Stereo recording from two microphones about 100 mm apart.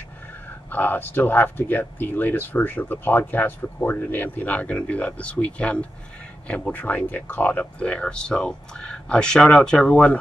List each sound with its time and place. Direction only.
0.7 s speech: 20° left (ahead or behind)